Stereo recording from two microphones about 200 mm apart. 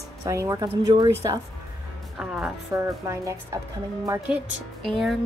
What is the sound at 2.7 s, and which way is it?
A woman's voice, 15° right (ahead or behind).